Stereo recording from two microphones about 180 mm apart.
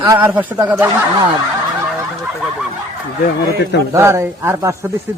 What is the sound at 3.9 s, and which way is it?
Speech, 15° right (ahead or behind).